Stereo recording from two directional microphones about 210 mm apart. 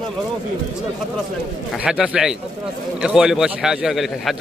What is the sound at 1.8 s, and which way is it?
A man's voice, 5° right (ahead or behind).